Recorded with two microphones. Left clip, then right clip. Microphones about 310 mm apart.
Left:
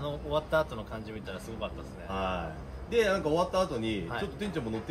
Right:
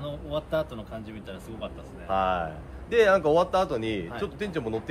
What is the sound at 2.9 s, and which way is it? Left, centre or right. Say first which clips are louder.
Speech: right 7 dB; centre.